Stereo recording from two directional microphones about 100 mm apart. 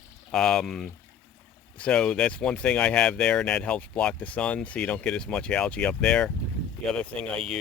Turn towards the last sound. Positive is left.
turn(degrees=5)  # may be behind; listen again after turning